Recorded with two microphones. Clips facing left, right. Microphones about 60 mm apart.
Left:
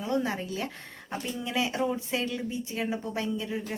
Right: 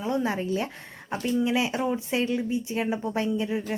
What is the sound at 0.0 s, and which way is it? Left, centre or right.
A woman's voice, right.